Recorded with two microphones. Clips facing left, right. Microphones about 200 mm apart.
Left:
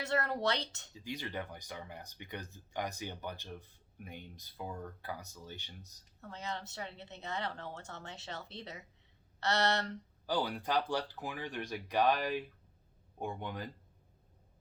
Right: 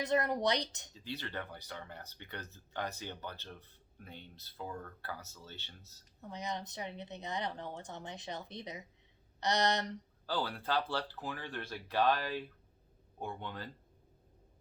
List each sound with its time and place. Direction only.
0.0 s speech: 15° right (ahead or behind)
0.9 s speech: 15° left (ahead or behind)
6.2 s speech: 15° right (ahead or behind)
10.2 s speech: 15° left (ahead or behind)